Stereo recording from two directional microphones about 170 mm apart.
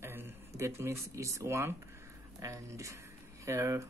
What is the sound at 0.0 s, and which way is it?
Speech, 15° right (ahead or behind).